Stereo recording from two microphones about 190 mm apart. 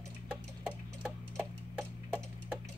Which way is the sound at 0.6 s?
10° right (ahead or behind).